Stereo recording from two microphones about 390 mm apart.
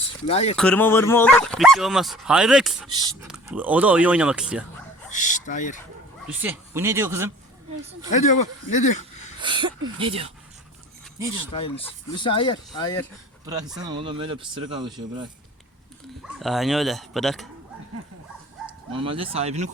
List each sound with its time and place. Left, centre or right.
0.3 s speech: centre
0.5 s speech: centre
5.0 s speech: centre
6.4 s speech: centre
8.1 s speech: centre
9.4 s speech: centre
11.5 s speech: centre
13.4 s speech: centre
16.4 s speech: centre
18.9 s speech: centre